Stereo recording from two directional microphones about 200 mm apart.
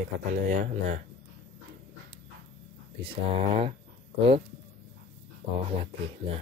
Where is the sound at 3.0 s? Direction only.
30° right (ahead or behind).